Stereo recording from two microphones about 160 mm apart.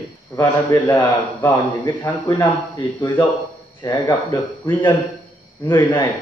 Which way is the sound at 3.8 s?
25° left (ahead or behind).